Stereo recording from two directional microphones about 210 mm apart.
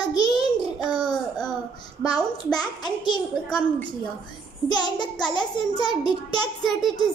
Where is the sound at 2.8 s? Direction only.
20° left (ahead or behind).